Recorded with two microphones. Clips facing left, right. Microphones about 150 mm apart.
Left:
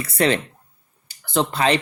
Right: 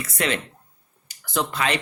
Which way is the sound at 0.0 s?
35° left (ahead or behind).